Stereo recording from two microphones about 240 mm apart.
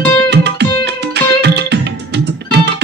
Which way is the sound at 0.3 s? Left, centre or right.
Right.